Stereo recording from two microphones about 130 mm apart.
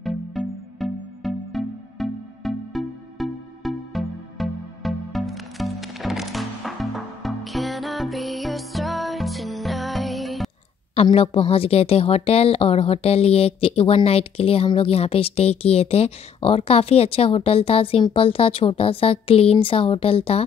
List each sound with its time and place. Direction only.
0.0 s music: centre (ahead or behind)
11.1 s a woman's voice: 45° left (ahead or behind)